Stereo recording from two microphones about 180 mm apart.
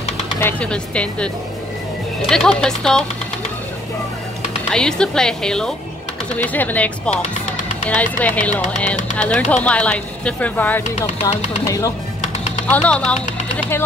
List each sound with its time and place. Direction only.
0.4 s a woman's voice: 10° left (ahead or behind)
4.7 s a woman's voice: 5° left (ahead or behind)
12.6 s speech: 5° left (ahead or behind)